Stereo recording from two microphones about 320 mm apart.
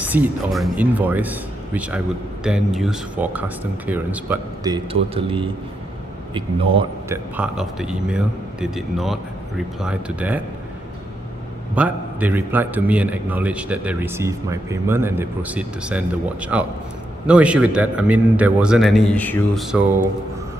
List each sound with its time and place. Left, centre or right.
0.0 s a man's voice: centre
7.3 s a man's voice: centre
11.7 s a man's voice: centre